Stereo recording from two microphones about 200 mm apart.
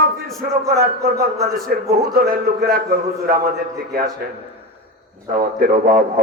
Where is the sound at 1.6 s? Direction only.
50° right (ahead or behind).